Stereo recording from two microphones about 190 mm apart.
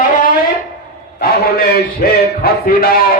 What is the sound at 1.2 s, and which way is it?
Speech, 55° left (ahead or behind).